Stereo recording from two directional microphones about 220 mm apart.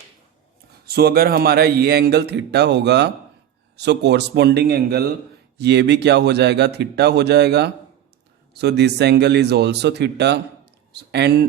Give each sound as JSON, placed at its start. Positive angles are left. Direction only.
{"t": 0.9, "sound": "a man's voice", "side_deg": -45}